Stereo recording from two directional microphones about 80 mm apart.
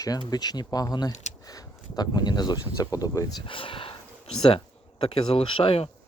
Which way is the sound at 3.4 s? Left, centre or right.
Left.